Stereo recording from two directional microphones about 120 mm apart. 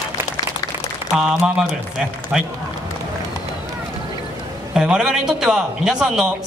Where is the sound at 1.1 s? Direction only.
5° right (ahead or behind).